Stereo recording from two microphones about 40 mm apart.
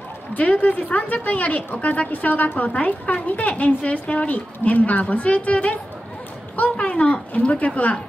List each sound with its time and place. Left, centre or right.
0.6 s a woman's voice: left